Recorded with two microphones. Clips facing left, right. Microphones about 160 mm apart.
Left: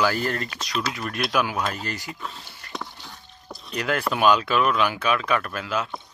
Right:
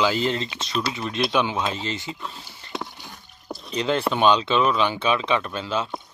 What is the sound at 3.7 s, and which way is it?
Speech, 25° right (ahead or behind).